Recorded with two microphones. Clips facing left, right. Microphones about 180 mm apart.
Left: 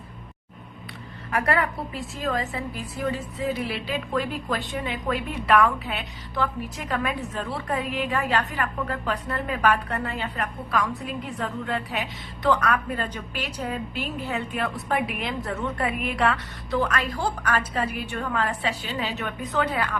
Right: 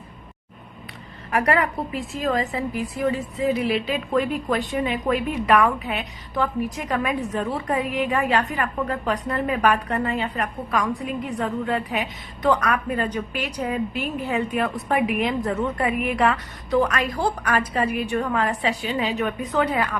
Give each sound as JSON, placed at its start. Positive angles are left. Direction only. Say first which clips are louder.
{"t": 1.3, "sound": "a woman's voice", "louder": "right 3 dB", "side_deg": -15}